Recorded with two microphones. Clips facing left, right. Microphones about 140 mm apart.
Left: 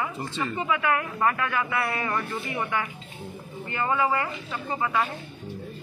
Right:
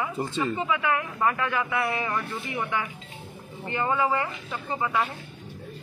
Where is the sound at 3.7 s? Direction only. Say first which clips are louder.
Even; 20° right (ahead or behind).